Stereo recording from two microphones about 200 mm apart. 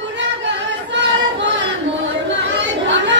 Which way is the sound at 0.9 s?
65° right (ahead or behind).